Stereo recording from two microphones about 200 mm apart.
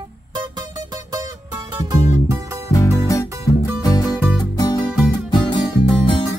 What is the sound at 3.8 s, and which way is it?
Music, 20° left (ahead or behind).